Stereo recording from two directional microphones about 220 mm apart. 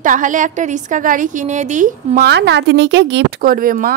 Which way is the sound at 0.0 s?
35° right (ahead or behind).